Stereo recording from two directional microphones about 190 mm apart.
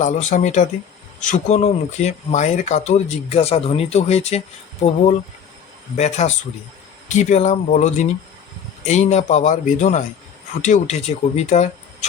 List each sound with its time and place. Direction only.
0.0 s speech: 40° left (ahead or behind)